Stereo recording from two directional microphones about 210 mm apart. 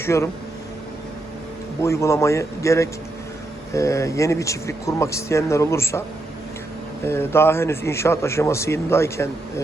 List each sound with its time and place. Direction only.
0.0 s speech: 15° left (ahead or behind)
1.8 s a man's voice: 15° left (ahead or behind)
7.0 s a man's voice: 10° left (ahead or behind)